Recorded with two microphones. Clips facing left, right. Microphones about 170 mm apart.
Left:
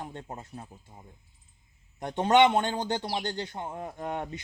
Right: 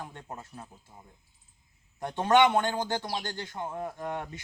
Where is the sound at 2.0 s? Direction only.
20° left (ahead or behind).